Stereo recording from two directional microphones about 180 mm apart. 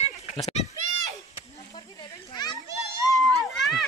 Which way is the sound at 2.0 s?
25° left (ahead or behind).